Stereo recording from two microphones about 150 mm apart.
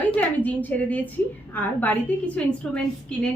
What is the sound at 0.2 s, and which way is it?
A woman's voice, 10° left (ahead or behind).